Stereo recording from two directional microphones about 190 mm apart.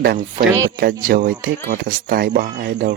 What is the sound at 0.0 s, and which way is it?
Speech, 55° right (ahead or behind).